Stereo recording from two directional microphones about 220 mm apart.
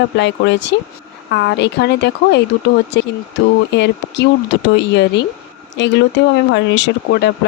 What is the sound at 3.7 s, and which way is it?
Speech, 50° left (ahead or behind).